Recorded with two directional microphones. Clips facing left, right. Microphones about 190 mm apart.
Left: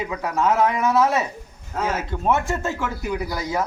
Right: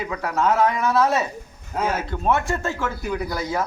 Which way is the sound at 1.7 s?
15° right (ahead or behind).